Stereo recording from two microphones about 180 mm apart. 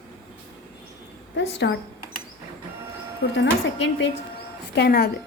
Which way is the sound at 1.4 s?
80° left.